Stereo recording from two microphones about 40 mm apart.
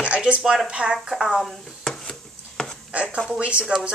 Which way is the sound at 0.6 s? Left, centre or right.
Right.